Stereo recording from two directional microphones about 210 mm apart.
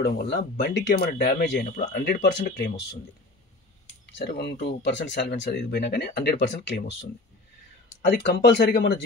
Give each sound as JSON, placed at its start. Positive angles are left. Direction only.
{"t": 0.0, "sound": "speech", "side_deg": 55}
{"t": 4.0, "sound": "speech", "side_deg": 50}